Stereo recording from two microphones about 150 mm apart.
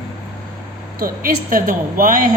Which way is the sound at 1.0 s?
70° right (ahead or behind).